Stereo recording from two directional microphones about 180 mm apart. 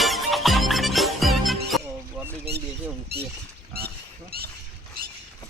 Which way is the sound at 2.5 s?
60° right (ahead or behind).